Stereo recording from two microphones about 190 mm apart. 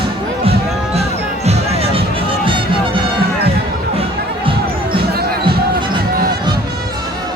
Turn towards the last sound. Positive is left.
turn(degrees=-55)  # may be behind; listen again after turning